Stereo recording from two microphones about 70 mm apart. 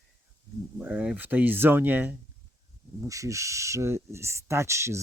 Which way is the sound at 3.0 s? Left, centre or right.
Right.